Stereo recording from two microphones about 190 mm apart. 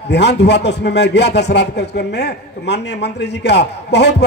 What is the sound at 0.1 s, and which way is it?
A man's voice, 60° left (ahead or behind).